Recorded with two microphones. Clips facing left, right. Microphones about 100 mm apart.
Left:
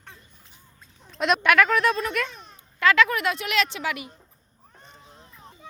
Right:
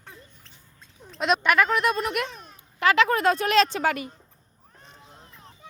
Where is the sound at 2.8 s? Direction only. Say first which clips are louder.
Even; 25° right (ahead or behind); by 4.0 s 45° right (ahead or behind).